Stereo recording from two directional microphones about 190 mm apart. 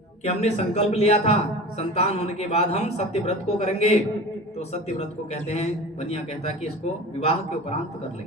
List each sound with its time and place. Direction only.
0.3 s speech: 35° left (ahead or behind)